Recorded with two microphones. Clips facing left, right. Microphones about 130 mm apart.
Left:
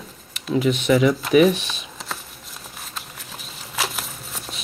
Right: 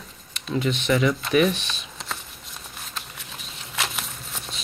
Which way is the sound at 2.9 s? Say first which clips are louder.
Even; centre (ahead or behind).